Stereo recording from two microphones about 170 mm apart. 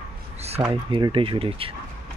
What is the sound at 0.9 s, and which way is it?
Speech, 30° right (ahead or behind).